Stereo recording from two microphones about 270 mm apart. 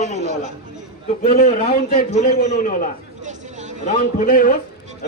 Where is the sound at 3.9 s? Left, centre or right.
Left.